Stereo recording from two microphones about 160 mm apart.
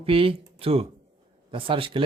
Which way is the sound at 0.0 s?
35° right (ahead or behind).